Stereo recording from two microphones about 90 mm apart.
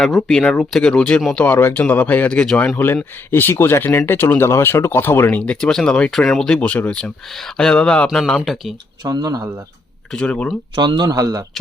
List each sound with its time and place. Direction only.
0.0 s speech: centre (ahead or behind)
1.4 s speech: 25° left (ahead or behind)
2.7 s speech: 25° left (ahead or behind)
5.4 s speech: 10° left (ahead or behind)
9.0 s speech: 45° right (ahead or behind)
10.1 s speech: 10° left (ahead or behind)
10.8 s speech: 55° right (ahead or behind)
11.1 s speech: 40° right (ahead or behind)